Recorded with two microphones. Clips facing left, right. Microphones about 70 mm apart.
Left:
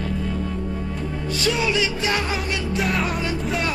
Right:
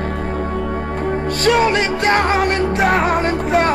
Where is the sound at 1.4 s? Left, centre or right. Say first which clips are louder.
Right 7 dB; right.